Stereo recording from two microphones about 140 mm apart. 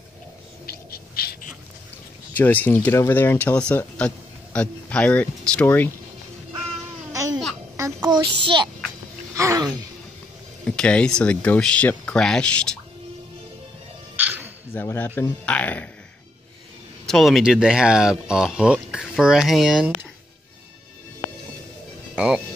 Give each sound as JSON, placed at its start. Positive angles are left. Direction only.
{"t": 0.7, "sound": "bird", "side_deg": 90}
{"t": 2.3, "sound": "speech", "side_deg": 10}
{"t": 7.1, "sound": "babbling", "side_deg": -25}
{"t": 8.0, "sound": "a child's voice", "side_deg": -35}
{"t": 9.3, "sound": "a sound", "side_deg": -20}
{"t": 10.6, "sound": "speech", "side_deg": 5}
{"t": 14.1, "sound": "dog", "side_deg": -15}
{"t": 14.7, "sound": "speech", "side_deg": 15}
{"t": 17.0, "sound": "speech", "side_deg": 0}
{"t": 22.1, "sound": "speech", "side_deg": -5}